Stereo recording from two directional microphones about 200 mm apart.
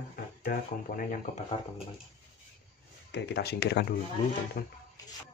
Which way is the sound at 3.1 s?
55° left (ahead or behind).